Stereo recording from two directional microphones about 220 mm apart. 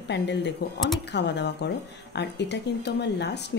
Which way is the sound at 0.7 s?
Centre (ahead or behind).